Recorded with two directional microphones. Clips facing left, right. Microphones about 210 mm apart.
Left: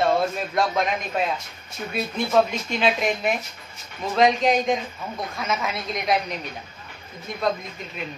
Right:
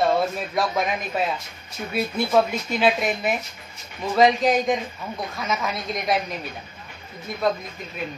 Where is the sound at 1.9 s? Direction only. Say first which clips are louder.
Right 2 dB; 5° right (ahead or behind).